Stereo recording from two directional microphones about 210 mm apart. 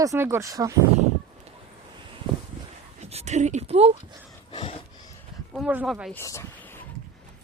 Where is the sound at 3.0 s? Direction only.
30° right (ahead or behind).